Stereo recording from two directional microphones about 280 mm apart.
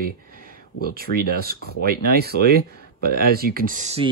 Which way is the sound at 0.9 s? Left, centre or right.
Right.